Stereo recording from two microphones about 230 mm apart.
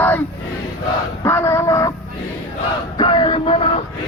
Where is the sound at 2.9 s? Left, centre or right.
Left.